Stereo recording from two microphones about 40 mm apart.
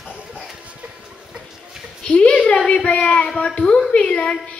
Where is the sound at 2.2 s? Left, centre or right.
Left.